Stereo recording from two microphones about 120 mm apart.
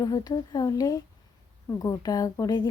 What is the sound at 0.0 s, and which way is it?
A woman's voice, 30° left (ahead or behind).